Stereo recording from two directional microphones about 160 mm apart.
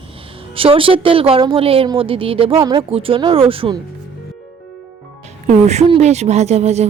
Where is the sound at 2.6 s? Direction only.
25° right (ahead or behind).